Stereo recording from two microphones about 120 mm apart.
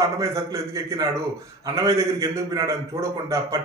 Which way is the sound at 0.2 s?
25° right (ahead or behind).